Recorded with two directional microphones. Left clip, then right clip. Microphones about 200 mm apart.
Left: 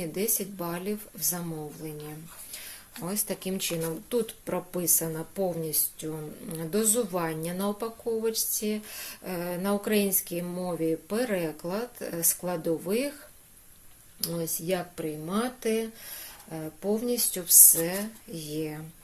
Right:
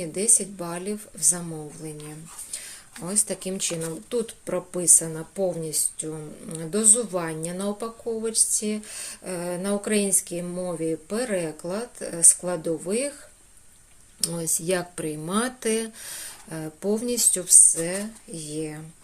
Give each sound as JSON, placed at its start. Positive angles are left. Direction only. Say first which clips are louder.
{"t": 0.0, "sound": "a woman's voice", "louder": "right 5 dB", "side_deg": 0}
{"t": 14.2, "sound": "speech", "louder": "right 3 dB", "side_deg": -10}